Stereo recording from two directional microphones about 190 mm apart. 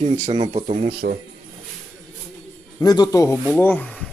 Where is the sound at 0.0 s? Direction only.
35° right (ahead or behind).